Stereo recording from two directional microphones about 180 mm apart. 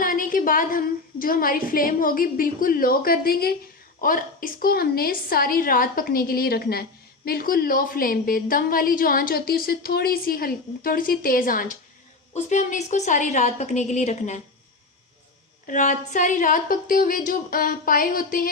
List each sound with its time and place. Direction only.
0.0 s a woman's voice: 50° left (ahead or behind)
12.3 s a woman's voice: 40° left (ahead or behind)
15.6 s a woman's voice: 45° left (ahead or behind)